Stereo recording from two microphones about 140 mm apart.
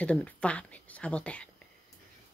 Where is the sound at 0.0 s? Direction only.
10° left (ahead or behind).